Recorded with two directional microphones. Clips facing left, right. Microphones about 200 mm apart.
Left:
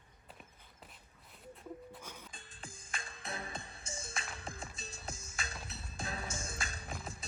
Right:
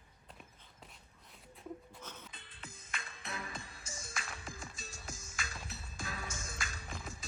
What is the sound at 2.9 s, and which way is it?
Music, 30° left (ahead or behind).